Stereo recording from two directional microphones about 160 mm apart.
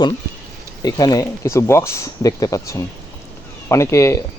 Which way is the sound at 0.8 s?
25° left (ahead or behind).